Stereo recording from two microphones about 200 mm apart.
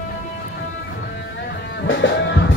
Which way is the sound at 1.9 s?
70° left (ahead or behind).